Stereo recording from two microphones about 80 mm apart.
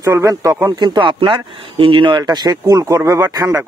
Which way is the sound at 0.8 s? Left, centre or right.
Right.